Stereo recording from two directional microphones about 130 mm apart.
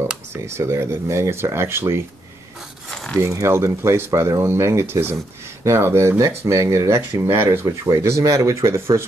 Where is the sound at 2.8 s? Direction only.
5° left (ahead or behind).